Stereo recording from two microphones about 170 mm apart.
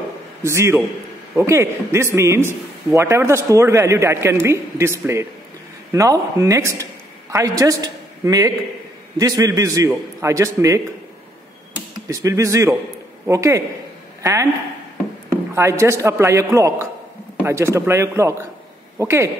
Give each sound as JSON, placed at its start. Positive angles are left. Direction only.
{"t": 0.4, "sound": "a man's voice", "side_deg": -15}
{"t": 12.1, "sound": "a man's voice", "side_deg": -20}
{"t": 15.5, "sound": "a man's voice", "side_deg": -15}